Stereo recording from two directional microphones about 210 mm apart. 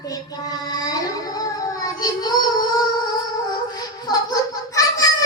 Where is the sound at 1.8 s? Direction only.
20° left (ahead or behind).